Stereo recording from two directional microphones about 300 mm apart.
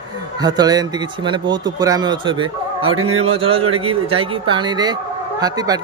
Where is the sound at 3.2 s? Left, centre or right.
Centre.